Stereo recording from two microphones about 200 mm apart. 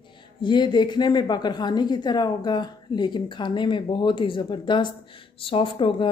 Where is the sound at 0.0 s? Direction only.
25° left (ahead or behind).